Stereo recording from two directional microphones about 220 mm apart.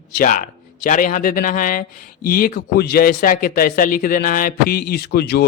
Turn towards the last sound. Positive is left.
turn(degrees=45)  # may be behind; listen again after turning